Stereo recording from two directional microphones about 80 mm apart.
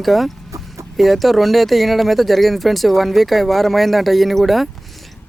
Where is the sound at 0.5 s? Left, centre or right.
Right.